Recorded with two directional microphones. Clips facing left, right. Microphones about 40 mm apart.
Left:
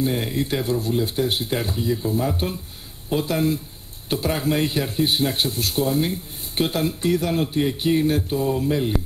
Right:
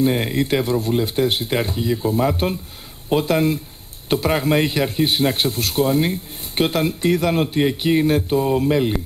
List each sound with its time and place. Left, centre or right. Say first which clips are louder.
0.0 s a man's voice: right 4 dB; right